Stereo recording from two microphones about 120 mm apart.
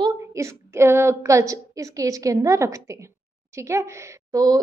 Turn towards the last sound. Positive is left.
turn(degrees=-30)  # may be behind; listen again after turning